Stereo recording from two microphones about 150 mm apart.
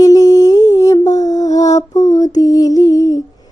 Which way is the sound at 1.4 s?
20° left (ahead or behind).